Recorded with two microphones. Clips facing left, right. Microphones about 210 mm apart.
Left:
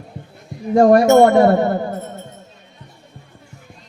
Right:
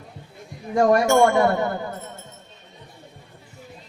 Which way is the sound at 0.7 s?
35° left (ahead or behind).